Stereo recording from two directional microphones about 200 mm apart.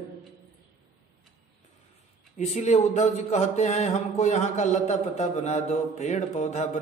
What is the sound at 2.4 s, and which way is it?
A man's voice, 35° left (ahead or behind).